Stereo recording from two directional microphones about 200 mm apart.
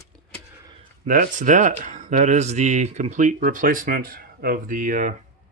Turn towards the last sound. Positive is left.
turn(degrees=-40)  # may be behind; listen again after turning